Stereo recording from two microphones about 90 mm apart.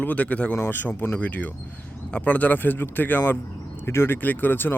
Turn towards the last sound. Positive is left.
turn(degrees=20)  # may be behind; listen again after turning